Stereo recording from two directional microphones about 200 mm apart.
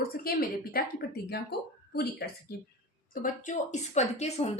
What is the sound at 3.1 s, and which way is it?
A woman's voice, 40° left (ahead or behind).